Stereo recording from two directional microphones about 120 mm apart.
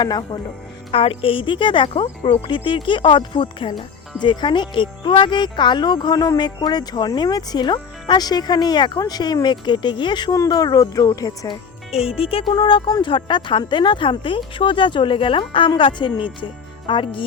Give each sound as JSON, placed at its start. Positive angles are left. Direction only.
{"t": 0.0, "sound": "speech", "side_deg": 40}
{"t": 0.9, "sound": "speech", "side_deg": 50}
{"t": 10.3, "sound": "speech", "side_deg": 30}
{"t": 11.9, "sound": "speech", "side_deg": 55}